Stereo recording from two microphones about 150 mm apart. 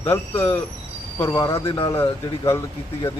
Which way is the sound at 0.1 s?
15° left (ahead or behind).